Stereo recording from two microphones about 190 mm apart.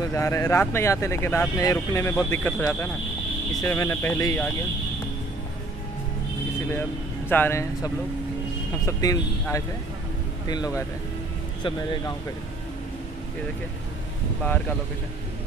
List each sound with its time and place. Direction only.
0.0 s speech: 15° left (ahead or behind)
6.7 s speech: 10° left (ahead or behind)